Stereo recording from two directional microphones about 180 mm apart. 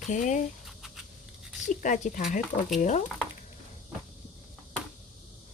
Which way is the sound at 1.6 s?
45° left (ahead or behind).